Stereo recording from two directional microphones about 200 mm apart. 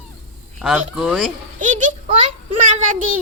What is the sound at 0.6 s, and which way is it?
Speech, centre (ahead or behind).